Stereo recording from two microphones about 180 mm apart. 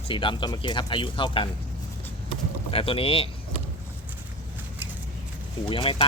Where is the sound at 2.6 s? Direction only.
30° left (ahead or behind).